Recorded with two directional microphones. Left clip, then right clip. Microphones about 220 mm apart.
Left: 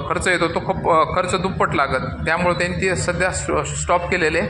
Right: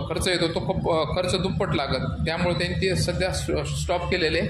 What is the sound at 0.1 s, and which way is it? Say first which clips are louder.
A man's voice: left 6 dB; 5° right (ahead or behind).